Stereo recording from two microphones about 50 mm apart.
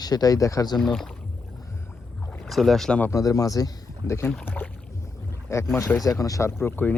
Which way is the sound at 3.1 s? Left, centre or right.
Left.